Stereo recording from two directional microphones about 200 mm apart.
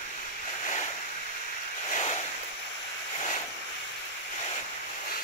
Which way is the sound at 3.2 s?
30° left (ahead or behind).